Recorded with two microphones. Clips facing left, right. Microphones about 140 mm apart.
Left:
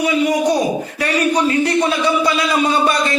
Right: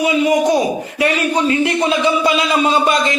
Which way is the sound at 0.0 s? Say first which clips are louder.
Right 2 dB; 25° right (ahead or behind).